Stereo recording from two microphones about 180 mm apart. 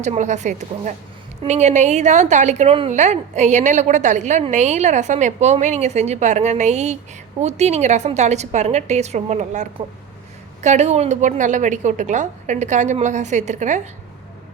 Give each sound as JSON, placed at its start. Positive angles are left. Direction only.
{"t": 0.0, "sound": "a woman's voice", "side_deg": -40}